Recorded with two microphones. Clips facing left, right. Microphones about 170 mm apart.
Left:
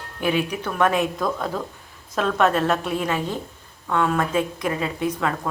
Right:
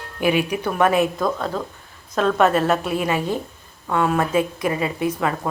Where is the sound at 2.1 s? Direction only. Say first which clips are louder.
Right 3 dB; centre (ahead or behind).